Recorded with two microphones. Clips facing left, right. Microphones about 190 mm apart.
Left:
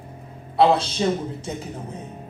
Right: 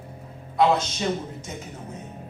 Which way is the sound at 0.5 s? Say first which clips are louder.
Left 3 dB; 30° left (ahead or behind).